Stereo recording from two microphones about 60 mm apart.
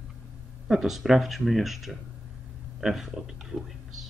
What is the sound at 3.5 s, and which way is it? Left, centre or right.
Speech, right.